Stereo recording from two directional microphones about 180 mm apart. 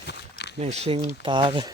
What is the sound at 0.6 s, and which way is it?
Speech, 35° right (ahead or behind).